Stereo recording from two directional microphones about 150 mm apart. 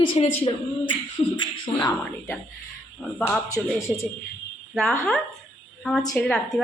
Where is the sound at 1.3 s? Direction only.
25° left (ahead or behind).